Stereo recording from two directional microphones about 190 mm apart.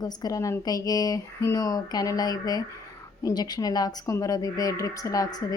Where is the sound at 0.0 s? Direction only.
20° left (ahead or behind).